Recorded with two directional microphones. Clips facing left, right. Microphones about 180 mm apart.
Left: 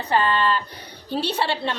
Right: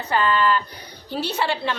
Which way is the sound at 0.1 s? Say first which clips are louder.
Right 1 dB; 30° left (ahead or behind).